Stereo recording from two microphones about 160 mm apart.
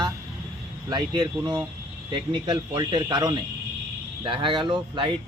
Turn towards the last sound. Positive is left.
turn(degrees=-30)  # may be behind; listen again after turning